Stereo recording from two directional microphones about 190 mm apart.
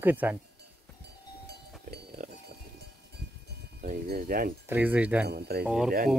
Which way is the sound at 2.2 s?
45° right (ahead or behind).